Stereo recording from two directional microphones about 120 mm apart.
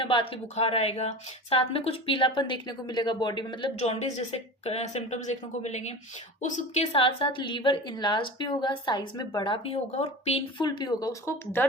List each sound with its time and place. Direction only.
0.0 s speech: 45° left (ahead or behind)
0.5 s speech: 60° left (ahead or behind); by 3.7 s 40° left (ahead or behind)
3.8 s speech: 65° left (ahead or behind)
6.9 s a woman's voice: 50° left (ahead or behind)
9.9 s speech: 60° left (ahead or behind)
10.6 s a woman's voice: 40° left (ahead or behind)